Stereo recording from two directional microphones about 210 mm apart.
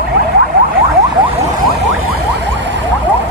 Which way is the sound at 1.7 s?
55° right (ahead or behind).